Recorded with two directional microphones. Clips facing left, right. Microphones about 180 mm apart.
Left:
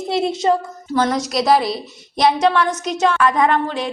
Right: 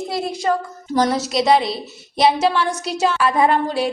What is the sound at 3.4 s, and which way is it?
Speech, 35° right (ahead or behind).